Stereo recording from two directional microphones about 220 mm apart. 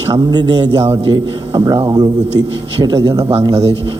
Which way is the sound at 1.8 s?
15° right (ahead or behind).